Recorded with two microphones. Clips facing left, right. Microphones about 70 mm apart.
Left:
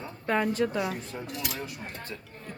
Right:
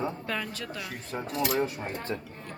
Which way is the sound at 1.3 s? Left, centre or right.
Right.